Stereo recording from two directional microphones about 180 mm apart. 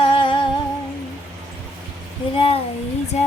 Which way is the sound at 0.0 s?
30° left (ahead or behind).